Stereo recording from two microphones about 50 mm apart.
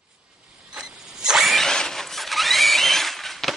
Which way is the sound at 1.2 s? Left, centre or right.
Centre.